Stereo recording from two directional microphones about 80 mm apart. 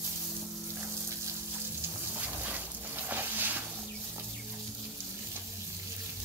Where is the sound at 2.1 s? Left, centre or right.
Right.